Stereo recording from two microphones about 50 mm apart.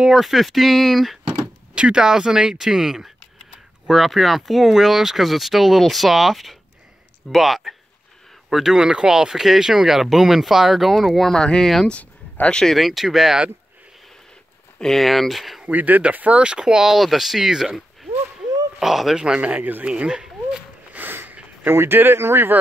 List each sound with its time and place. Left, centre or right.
0.0 s speech: centre
1.4 s speech: centre
11.2 s speech: centre
11.9 s a sound: left
12.4 s speech: centre
12.7 s speech: centre
14.8 s speech: centre
15.6 s speech: right
16.4 s speech: centre
19.1 s speech: centre
19.9 s speech: centre
20.9 s sniff: right
21.6 s speech: right